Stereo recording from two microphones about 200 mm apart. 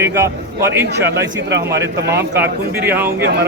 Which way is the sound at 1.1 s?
60° right (ahead or behind).